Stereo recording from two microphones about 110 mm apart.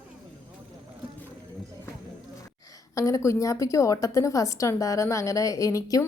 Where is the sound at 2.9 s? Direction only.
30° left (ahead or behind).